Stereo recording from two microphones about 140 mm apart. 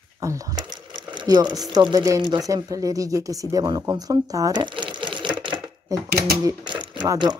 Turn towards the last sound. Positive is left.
turn(degrees=-30)  # may be behind; listen again after turning